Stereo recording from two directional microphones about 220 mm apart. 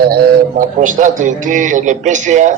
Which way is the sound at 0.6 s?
35° right (ahead or behind).